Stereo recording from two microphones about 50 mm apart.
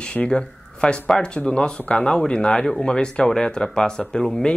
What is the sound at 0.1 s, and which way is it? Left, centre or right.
Speech, centre.